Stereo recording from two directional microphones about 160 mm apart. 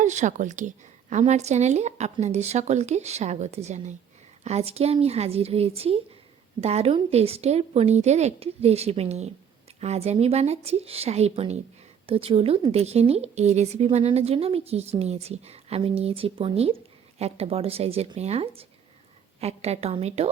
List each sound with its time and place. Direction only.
0.0 s speech: 50° right (ahead or behind)